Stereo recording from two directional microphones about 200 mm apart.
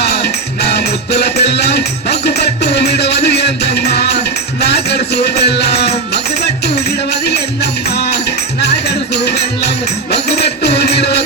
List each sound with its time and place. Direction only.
0.0 s music: 55° left (ahead or behind)